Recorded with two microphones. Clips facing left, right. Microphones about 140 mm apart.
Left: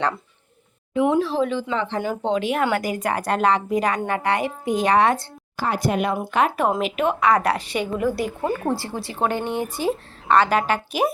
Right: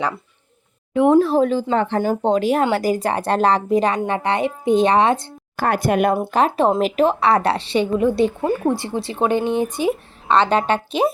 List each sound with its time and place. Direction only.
0.9 s a woman's voice: 45° right (ahead or behind); by 5.3 s 20° right (ahead or behind)
5.5 s speech: 55° right (ahead or behind)
6.1 s a woman's voice: 30° right (ahead or behind)